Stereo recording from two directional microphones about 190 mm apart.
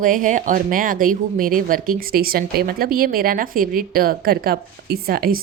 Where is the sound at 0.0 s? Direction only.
45° right (ahead or behind).